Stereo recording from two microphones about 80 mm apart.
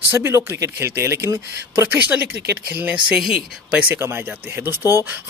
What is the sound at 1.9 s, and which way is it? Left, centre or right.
Speech, centre.